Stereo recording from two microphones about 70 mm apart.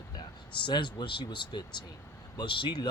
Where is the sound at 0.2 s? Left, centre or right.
Left.